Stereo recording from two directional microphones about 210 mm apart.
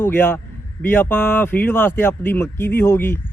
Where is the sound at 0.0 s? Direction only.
10° left (ahead or behind).